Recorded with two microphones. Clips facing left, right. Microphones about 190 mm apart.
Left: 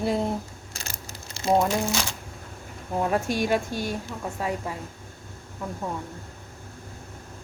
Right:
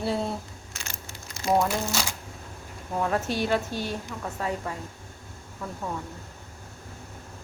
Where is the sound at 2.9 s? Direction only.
15° left (ahead or behind).